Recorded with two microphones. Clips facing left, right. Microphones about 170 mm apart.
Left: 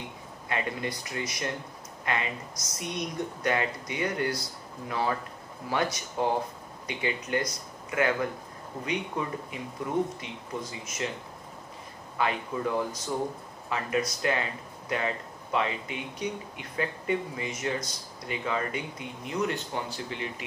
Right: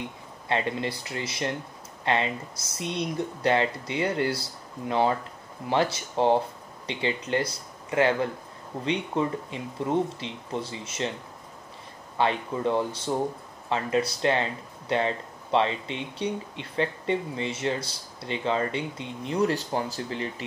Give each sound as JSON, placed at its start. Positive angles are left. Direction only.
{"t": 0.5, "sound": "speech", "side_deg": -30}
{"t": 12.2, "sound": "speech", "side_deg": -30}